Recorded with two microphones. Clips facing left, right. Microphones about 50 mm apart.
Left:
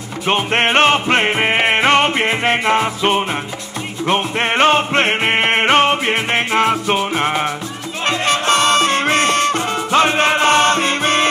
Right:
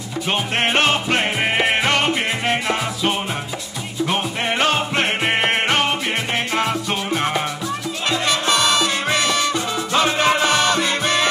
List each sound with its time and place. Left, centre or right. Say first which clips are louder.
0.3 s music: left 5 dB; left
8.1 s music: left 4 dB; left